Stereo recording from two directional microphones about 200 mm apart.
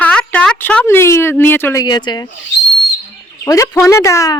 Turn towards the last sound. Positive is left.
turn(degrees=15)  # may be behind; listen again after turning